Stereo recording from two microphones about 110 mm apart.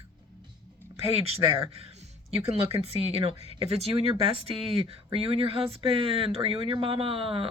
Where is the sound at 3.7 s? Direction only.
65° right (ahead or behind).